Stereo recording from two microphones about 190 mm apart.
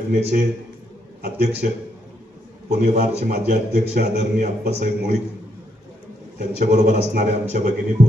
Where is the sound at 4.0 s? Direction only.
50° right (ahead or behind).